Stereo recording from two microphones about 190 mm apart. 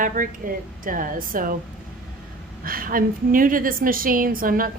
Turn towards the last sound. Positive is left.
turn(degrees=-50)  # may be behind; listen again after turning